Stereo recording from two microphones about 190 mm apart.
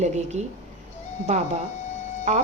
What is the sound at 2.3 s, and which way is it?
Speech, 35° right (ahead or behind).